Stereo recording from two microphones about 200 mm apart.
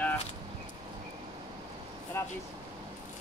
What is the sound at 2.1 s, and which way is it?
Speech, 10° left (ahead or behind).